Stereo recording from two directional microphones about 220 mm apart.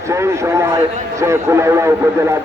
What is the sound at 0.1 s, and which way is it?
A man's voice, 15° right (ahead or behind).